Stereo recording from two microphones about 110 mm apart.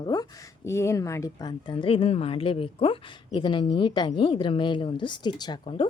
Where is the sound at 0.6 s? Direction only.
25° left (ahead or behind).